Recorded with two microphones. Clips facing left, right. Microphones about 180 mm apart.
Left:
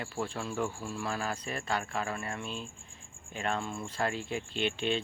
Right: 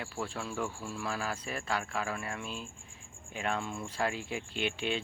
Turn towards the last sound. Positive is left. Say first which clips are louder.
# left 2 dB
turn(degrees=-5)  # may be behind; listen again after turning